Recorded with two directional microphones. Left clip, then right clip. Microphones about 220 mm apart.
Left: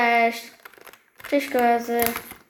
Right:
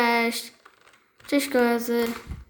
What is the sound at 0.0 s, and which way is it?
Crumpling, 60° right (ahead or behind).